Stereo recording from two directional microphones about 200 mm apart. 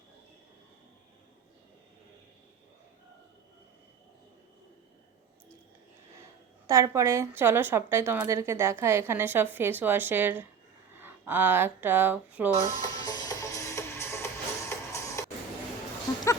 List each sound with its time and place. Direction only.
6.7 s a woman's voice: 15° right (ahead or behind)
13.0 s music: 20° left (ahead or behind)